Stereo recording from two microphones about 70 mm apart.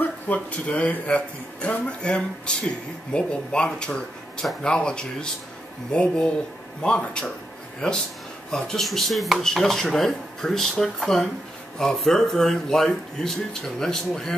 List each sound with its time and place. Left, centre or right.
0.0 s speech: left
8.5 s speech: centre